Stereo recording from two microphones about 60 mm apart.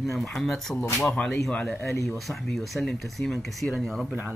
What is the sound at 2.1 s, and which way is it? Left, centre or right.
Speech, centre.